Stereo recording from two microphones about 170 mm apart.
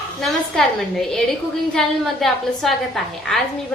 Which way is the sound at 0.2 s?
5° left (ahead or behind).